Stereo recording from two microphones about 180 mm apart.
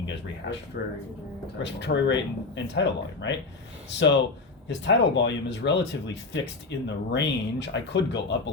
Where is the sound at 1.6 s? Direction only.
75° left (ahead or behind).